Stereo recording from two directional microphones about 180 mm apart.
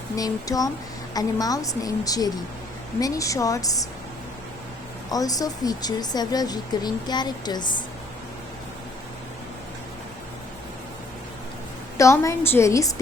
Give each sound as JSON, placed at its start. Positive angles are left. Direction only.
{"t": 0.2, "sound": "speech", "side_deg": 20}
{"t": 5.1, "sound": "speech", "side_deg": 20}
{"t": 11.9, "sound": "a woman's voice", "side_deg": 15}